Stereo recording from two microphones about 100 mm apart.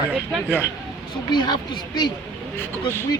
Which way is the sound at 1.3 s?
50° left (ahead or behind).